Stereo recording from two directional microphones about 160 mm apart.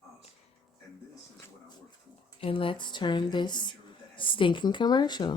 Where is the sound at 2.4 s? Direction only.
35° left (ahead or behind).